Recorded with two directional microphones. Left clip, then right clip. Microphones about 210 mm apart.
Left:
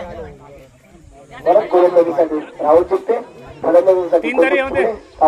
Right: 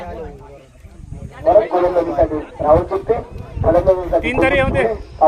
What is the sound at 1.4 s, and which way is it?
A man's voice, 50° left (ahead or behind).